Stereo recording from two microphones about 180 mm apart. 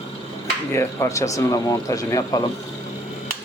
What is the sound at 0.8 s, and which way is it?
Speech, 15° left (ahead or behind).